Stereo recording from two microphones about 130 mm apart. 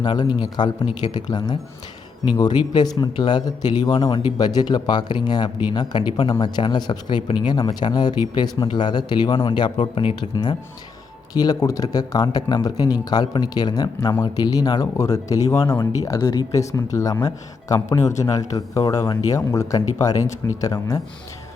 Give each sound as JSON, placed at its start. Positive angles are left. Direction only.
{"t": 0.0, "sound": "speech", "side_deg": 35}